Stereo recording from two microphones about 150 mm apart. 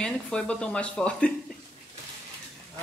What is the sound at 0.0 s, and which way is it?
Speech, 5° left (ahead or behind).